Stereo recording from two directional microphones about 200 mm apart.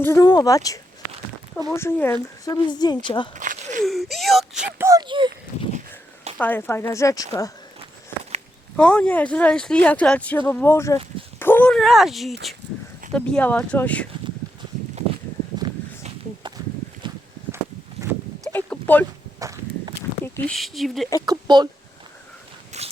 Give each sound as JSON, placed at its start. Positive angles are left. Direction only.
{"t": 0.0, "sound": "a woman's voice", "side_deg": 15}
{"t": 3.3, "sound": "walk", "side_deg": -40}
{"t": 3.8, "sound": "speech", "side_deg": 0}
{"t": 4.9, "sound": "speech", "side_deg": -20}
{"t": 6.3, "sound": "speech", "side_deg": 10}
{"t": 8.7, "sound": "speech", "side_deg": 5}
{"t": 17.0, "sound": "walk", "side_deg": -25}
{"t": 18.0, "sound": "a sound", "side_deg": -15}
{"t": 18.4, "sound": "a sound", "side_deg": 5}
{"t": 19.4, "sound": "walk", "side_deg": -15}
{"t": 20.5, "sound": "speech", "side_deg": 0}
{"t": 21.2, "sound": "speech", "side_deg": -20}
{"t": 22.7, "sound": "a sound", "side_deg": -35}